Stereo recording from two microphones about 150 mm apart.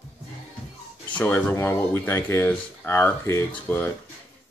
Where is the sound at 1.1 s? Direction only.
10° left (ahead or behind).